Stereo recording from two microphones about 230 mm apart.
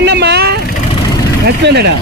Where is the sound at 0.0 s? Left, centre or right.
Right.